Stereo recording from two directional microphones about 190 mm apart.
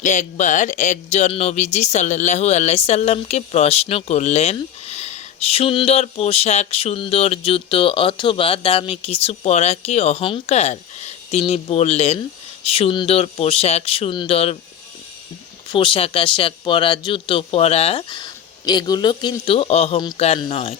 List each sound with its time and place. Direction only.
0.0 s speech: 40° left (ahead or behind)
15.7 s speech: 25° left (ahead or behind)